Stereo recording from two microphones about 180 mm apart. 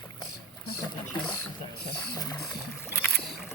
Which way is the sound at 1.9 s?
20° left (ahead or behind).